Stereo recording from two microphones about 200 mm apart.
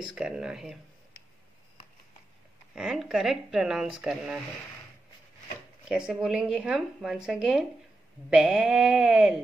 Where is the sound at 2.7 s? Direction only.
Centre (ahead or behind).